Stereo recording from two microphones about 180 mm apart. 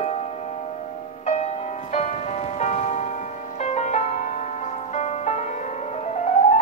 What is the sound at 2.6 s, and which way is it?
Music, 40° left (ahead or behind).